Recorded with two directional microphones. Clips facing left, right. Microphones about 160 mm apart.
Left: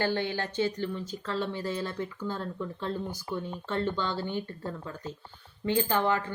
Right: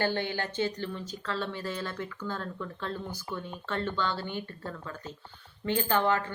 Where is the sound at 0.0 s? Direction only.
25° right (ahead or behind).